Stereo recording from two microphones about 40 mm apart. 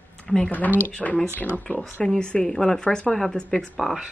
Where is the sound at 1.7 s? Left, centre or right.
Left.